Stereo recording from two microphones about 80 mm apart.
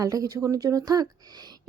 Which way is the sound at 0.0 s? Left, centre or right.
Right.